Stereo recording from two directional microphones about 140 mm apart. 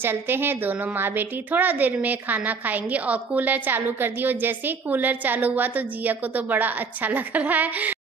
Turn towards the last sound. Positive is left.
turn(degrees=-10)  # may be behind; listen again after turning